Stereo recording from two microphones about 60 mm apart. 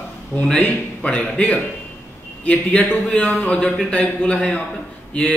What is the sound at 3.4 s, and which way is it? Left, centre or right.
A man's voice, left.